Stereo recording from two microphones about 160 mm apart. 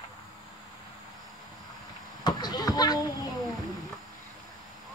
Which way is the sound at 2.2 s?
25° left (ahead or behind).